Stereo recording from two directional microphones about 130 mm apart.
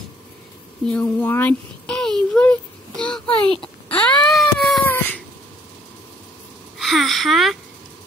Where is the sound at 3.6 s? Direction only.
10° left (ahead or behind).